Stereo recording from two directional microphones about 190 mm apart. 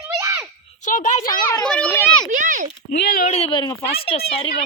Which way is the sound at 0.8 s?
45° left (ahead or behind).